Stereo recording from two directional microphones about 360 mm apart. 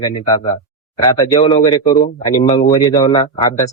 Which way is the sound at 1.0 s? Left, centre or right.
Centre.